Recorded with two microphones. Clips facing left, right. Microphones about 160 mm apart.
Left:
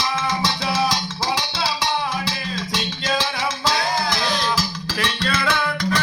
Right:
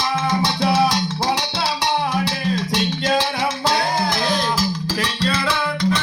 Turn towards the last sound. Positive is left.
turn(degrees=-30)  # may be behind; listen again after turning